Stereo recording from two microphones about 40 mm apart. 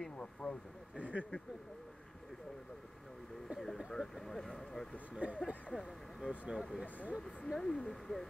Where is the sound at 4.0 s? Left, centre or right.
Centre.